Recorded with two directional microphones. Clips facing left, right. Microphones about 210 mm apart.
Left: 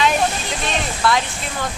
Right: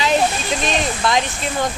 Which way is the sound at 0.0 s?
20° right (ahead or behind).